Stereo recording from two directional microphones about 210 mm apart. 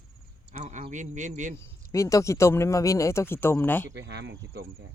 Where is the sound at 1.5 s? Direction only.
15° left (ahead or behind).